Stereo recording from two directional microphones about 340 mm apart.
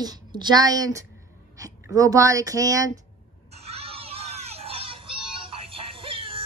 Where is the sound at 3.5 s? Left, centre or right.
Centre.